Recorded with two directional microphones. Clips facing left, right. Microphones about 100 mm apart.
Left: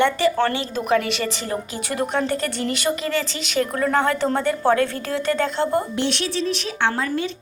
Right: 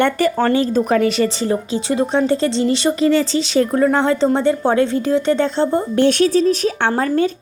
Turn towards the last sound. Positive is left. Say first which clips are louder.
# right 6 dB
turn(degrees=-40)  # may be behind; listen again after turning